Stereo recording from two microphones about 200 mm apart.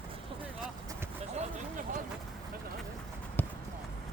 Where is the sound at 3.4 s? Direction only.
10° left (ahead or behind).